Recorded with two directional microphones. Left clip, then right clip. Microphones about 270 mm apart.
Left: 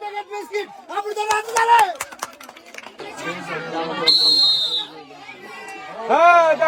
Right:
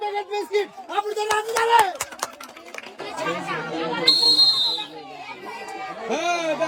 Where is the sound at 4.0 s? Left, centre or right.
Centre.